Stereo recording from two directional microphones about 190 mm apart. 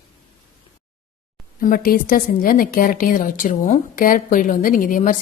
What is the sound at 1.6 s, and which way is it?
A woman's voice, 50° left (ahead or behind).